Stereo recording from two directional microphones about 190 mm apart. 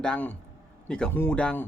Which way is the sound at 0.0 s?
5° left (ahead or behind).